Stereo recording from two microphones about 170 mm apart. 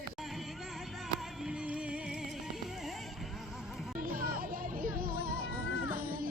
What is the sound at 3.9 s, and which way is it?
Music, 60° right (ahead or behind).